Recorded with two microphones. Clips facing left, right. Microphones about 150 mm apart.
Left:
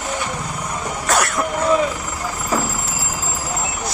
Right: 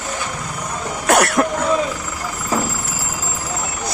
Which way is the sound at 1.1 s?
60° right (ahead or behind).